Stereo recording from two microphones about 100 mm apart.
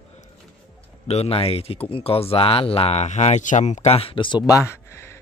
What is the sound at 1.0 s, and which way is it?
Speech, 90° left.